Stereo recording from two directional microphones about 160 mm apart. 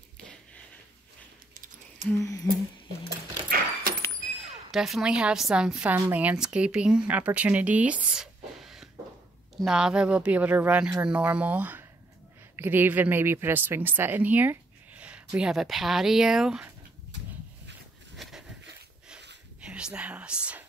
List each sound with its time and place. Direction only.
1.5 s a sound: 55° right (ahead or behind)
2.1 s humming: 20° left (ahead or behind)
3.1 s keys jangling: 70° right (ahead or behind)
4.2 s a woman's voice: centre (ahead or behind)
18.1 s a sound: centre (ahead or behind)
19.6 s whispering: 5° right (ahead or behind)